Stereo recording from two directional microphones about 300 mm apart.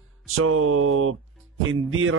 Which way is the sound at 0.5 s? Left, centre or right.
Right.